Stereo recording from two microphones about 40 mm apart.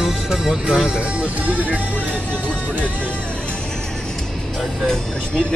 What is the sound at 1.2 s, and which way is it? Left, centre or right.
Music, right.